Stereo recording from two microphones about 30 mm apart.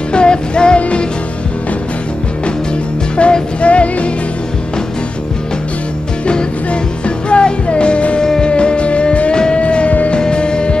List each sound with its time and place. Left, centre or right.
0.1 s music: left
0.7 s music: left
3.2 s music: left
6.2 s music: left
8.2 s music: left
8.5 s music: left
9.3 s music: left
9.8 s music: left
10.1 s music: left